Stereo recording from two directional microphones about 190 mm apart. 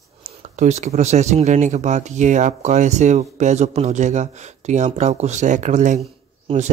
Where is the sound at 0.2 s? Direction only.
40° right (ahead or behind).